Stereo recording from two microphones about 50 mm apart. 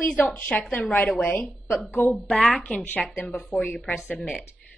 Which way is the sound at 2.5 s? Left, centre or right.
Left.